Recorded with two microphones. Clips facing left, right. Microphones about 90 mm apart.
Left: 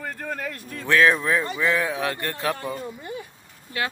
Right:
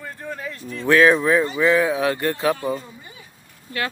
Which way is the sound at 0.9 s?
5° right (ahead or behind).